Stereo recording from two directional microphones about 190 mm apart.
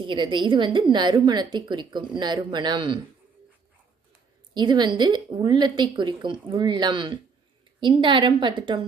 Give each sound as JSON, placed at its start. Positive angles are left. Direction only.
{"t": 0.1, "sound": "a woman's voice", "side_deg": -25}
{"t": 4.5, "sound": "a woman's voice", "side_deg": -25}